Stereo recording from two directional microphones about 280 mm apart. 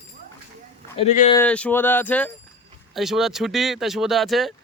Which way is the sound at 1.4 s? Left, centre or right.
Centre.